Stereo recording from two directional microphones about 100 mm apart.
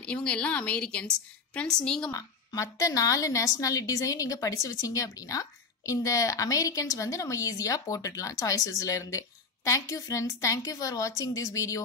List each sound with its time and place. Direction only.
0.0 s a woman's voice: 10° left (ahead or behind)
2.0 s a woman's voice: 35° left (ahead or behind)